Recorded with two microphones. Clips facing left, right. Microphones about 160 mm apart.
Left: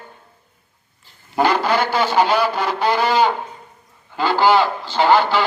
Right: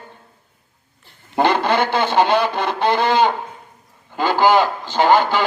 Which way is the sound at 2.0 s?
55° right (ahead or behind).